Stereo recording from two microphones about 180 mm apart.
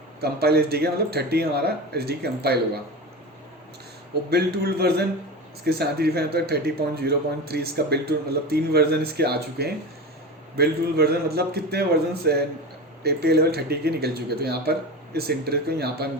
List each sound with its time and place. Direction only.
0.2 s a man's voice: 60° right (ahead or behind)
4.3 s a man's voice: 60° right (ahead or behind)